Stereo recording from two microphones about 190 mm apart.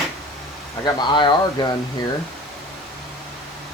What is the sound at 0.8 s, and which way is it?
Speech, 25° left (ahead or behind).